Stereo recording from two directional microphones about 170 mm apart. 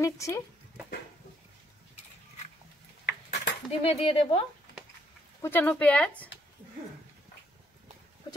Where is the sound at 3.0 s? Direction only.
85° left.